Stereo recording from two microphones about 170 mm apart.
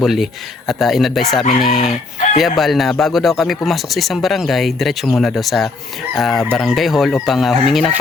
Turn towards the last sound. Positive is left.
turn(degrees=0)  # may be behind; listen again after turning